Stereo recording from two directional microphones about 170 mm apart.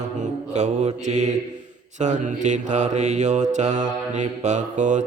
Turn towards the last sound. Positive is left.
turn(degrees=-45)  # may be behind; listen again after turning